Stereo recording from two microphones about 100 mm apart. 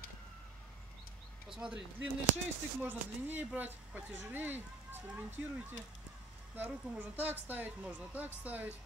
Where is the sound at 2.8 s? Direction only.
20° right (ahead or behind).